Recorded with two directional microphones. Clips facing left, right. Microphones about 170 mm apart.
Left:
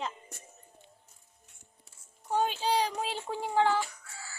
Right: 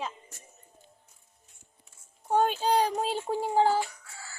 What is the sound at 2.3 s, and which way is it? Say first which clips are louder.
A child's voice: right 4 dB; 50° right (ahead or behind).